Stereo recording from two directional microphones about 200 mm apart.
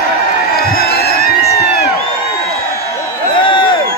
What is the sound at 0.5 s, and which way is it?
Crowd, 50° left (ahead or behind).